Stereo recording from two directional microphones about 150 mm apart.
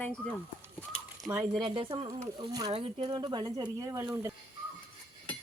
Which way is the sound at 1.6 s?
35° right (ahead or behind).